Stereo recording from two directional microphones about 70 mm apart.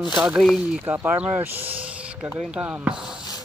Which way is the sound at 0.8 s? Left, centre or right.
Right.